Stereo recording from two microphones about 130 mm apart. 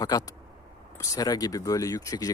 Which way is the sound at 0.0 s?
30° left (ahead or behind).